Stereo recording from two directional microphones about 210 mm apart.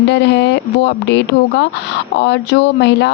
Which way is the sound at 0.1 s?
55° left (ahead or behind).